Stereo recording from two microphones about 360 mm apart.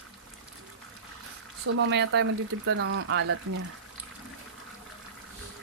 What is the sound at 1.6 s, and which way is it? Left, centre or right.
Speech, right.